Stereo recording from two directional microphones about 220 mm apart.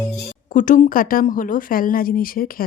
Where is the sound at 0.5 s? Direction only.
35° left (ahead or behind).